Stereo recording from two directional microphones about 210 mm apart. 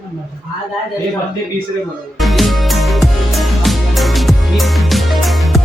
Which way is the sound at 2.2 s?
Centre (ahead or behind).